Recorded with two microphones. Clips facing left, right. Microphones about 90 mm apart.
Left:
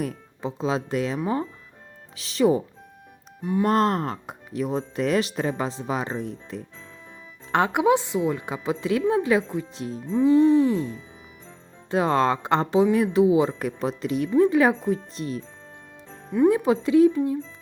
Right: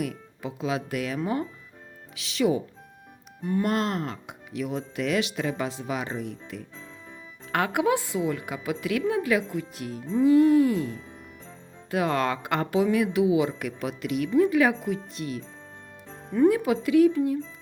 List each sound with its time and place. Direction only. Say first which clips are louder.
0.0 s a woman's voice: left 2 dB; 30° left (ahead or behind)
10.0 s music: left 1 dB; centre (ahead or behind)
10.2 s a woman's voice: left 1 dB; 25° left (ahead or behind)
16.1 s music: left 1 dB; 5° left (ahead or behind)
16.5 s a woman's voice: left 3 dB; 30° left (ahead or behind)